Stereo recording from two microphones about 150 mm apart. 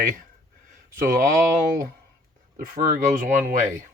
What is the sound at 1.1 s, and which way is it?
Speech, 65° right (ahead or behind).